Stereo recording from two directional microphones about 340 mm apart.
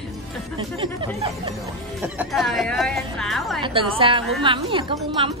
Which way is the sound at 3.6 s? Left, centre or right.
Centre.